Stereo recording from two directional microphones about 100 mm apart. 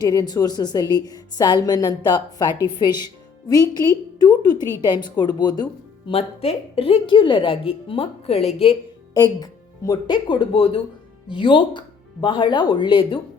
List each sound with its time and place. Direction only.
0.0 s a woman's voice: 40° left (ahead or behind)
6.1 s a woman's voice: 80° left
9.1 s a woman's voice: 40° left (ahead or behind); by 13.1 s 55° left (ahead or behind)